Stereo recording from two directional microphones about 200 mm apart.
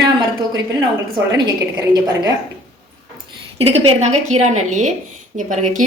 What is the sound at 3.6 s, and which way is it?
A woman's voice, 30° right (ahead or behind).